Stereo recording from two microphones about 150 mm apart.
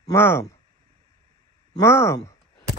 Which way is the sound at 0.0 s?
15° left (ahead or behind).